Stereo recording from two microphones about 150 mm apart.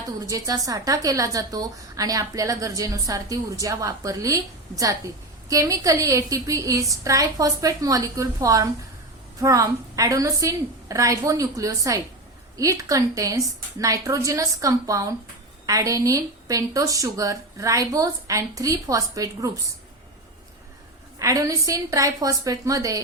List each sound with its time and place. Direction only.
0.3 s a woman's voice: 25° right (ahead or behind)
21.2 s a woman's voice: 20° right (ahead or behind)